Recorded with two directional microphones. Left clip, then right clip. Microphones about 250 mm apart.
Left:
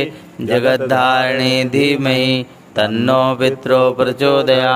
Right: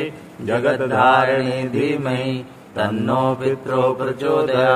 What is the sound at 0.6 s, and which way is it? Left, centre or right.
Mantra, left.